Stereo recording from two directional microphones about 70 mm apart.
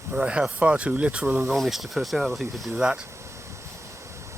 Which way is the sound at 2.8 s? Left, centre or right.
Centre.